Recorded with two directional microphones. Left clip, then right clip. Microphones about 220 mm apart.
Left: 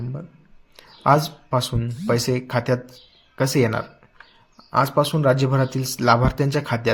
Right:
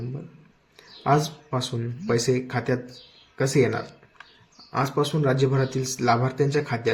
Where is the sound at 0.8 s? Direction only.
40° left (ahead or behind).